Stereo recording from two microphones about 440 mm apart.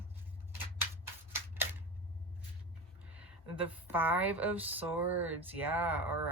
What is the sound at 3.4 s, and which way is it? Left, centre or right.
Speech, right.